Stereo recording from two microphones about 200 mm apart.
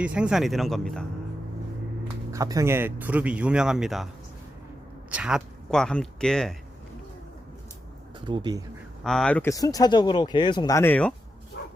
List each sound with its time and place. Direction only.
0.0 s speech: 5° right (ahead or behind)
2.3 s speech: 15° right (ahead or behind); by 4.1 s centre (ahead or behind)
5.1 s speech: 5° right (ahead or behind)
8.2 s speech: 20° right (ahead or behind)
9.0 s speech: 5° left (ahead or behind)
11.6 s bow-wow: 60° left (ahead or behind)